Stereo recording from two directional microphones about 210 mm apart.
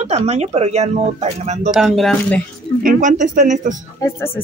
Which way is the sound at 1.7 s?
Centre (ahead or behind).